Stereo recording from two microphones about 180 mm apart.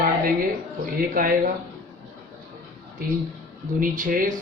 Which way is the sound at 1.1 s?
50° right (ahead or behind).